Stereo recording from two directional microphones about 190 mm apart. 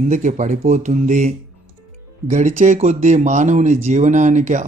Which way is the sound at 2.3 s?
40° right (ahead or behind).